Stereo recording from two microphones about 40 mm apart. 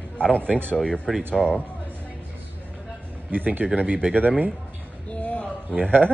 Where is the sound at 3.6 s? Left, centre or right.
Right.